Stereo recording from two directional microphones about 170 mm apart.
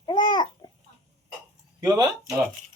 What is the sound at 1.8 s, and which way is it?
Speech, 20° right (ahead or behind).